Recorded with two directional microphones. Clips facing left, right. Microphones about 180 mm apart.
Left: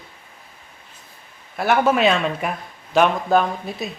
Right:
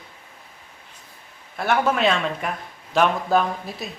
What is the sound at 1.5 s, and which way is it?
Speech, 5° left (ahead or behind).